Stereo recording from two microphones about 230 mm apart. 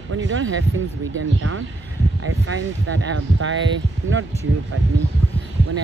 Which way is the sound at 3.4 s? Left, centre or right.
Right.